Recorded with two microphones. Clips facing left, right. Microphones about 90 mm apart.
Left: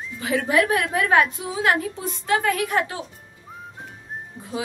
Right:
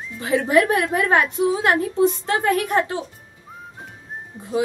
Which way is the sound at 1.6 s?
35° right (ahead or behind).